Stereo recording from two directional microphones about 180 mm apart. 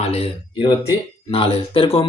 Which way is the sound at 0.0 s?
35° left (ahead or behind).